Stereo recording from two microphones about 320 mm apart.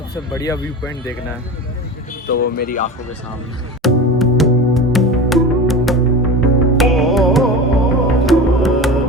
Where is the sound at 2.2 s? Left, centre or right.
Left.